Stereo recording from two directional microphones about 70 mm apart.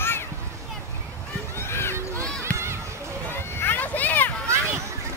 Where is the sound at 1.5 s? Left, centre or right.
Left.